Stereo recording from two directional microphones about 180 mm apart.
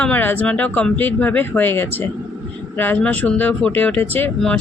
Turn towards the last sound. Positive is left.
turn(degrees=10)  # may be behind; listen again after turning